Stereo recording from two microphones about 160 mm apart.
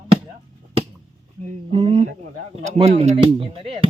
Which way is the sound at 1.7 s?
35° right (ahead or behind).